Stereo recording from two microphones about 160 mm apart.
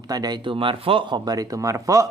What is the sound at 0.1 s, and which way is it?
Speech, 25° right (ahead or behind).